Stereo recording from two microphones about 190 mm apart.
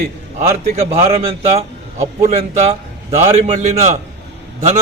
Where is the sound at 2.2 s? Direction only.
35° right (ahead or behind).